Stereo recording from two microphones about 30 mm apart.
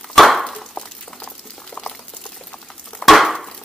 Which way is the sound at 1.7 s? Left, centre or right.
Left.